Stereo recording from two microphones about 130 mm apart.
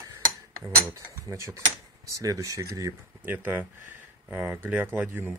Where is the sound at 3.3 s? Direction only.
15° right (ahead or behind).